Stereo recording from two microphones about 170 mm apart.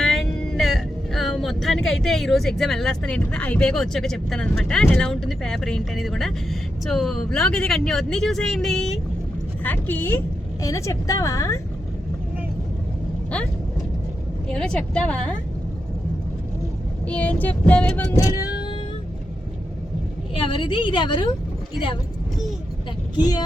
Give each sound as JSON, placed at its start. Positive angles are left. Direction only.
{"t": 0.0, "sound": "speech", "side_deg": 5}
{"t": 9.6, "sound": "vehicle", "side_deg": 10}
{"t": 10.6, "sound": "a woman's voice", "side_deg": 20}
{"t": 14.4, "sound": "speech", "side_deg": 5}
{"t": 17.1, "sound": "vehicle", "side_deg": 10}
{"t": 20.3, "sound": "a woman's voice", "side_deg": 30}